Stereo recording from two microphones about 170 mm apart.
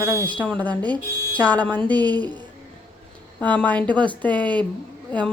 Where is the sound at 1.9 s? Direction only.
25° right (ahead or behind).